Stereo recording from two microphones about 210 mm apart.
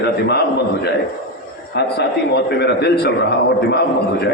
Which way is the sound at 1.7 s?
50° left (ahead or behind).